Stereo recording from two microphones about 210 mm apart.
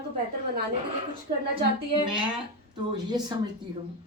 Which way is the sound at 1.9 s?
20° right (ahead or behind).